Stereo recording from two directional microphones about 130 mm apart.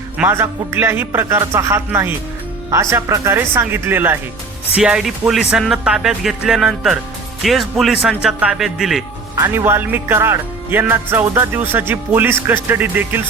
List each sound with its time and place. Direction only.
0.2 s speech: 20° right (ahead or behind)
4.8 s speech: 5° right (ahead or behind)
9.3 s speech: 20° right (ahead or behind)